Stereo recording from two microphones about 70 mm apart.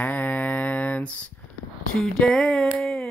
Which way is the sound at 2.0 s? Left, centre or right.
Centre.